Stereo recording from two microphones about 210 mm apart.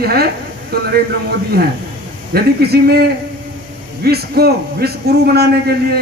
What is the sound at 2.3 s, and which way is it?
A man's voice, 50° right (ahead or behind).